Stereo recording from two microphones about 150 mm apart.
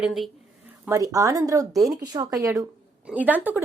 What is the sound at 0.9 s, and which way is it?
Speech, 20° right (ahead or behind).